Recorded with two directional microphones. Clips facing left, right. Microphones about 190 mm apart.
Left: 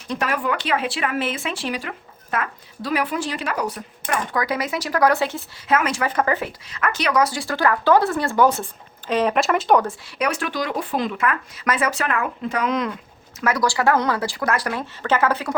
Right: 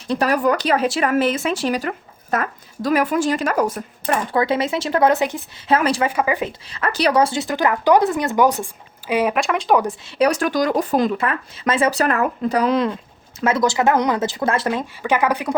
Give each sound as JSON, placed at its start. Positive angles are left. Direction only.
{"t": 0.1, "sound": "speech", "side_deg": -35}
{"t": 4.1, "sound": "speech", "side_deg": -25}
{"t": 5.6, "sound": "speech", "side_deg": -30}
{"t": 6.1, "sound": "speech", "side_deg": -10}
{"t": 6.7, "sound": "speech", "side_deg": -30}
{"t": 9.4, "sound": "speech", "side_deg": 0}
{"t": 10.2, "sound": "speech", "side_deg": -40}